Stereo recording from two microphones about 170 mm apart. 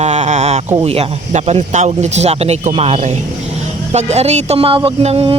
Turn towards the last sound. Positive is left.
turn(degrees=-35)  # may be behind; listen again after turning